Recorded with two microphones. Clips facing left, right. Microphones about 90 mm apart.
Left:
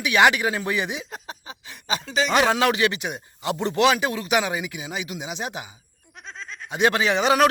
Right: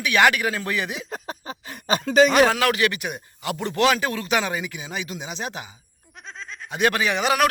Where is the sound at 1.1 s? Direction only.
45° right (ahead or behind).